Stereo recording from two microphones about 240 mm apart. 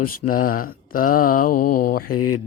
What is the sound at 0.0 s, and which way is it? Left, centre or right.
Mantra, left.